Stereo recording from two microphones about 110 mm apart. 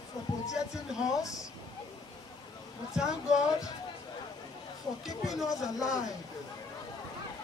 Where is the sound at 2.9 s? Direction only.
5° right (ahead or behind).